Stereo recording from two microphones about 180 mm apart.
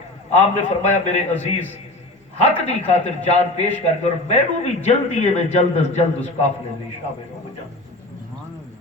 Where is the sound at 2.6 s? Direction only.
35° left (ahead or behind).